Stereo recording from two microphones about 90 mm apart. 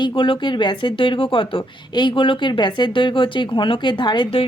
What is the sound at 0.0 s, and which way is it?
Speech, 70° left (ahead or behind).